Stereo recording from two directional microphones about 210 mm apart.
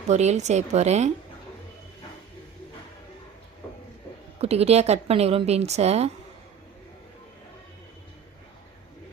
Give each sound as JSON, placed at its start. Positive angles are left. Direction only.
{"t": 0.1, "sound": "a woman's voice", "side_deg": -30}
{"t": 4.4, "sound": "a woman's voice", "side_deg": -30}